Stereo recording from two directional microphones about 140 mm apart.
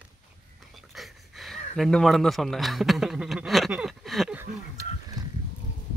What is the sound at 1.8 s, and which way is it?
A man's voice, 5° left (ahead or behind).